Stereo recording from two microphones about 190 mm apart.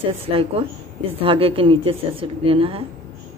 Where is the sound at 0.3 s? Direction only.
30° right (ahead or behind).